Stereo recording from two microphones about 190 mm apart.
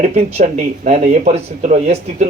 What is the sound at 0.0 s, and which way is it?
Speech, 35° right (ahead or behind).